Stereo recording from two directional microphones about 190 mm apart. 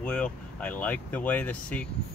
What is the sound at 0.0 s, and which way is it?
Speech, 5° left (ahead or behind).